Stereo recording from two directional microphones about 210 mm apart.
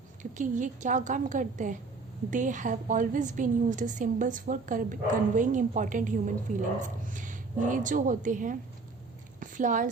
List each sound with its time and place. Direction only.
0.2 s a woman's voice: 35° right (ahead or behind)